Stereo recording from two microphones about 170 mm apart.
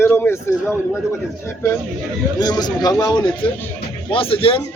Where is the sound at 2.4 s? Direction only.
25° left (ahead or behind).